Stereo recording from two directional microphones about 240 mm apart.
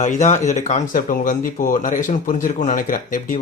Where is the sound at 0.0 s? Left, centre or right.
Left.